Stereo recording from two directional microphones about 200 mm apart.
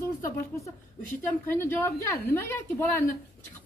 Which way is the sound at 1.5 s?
10° left (ahead or behind).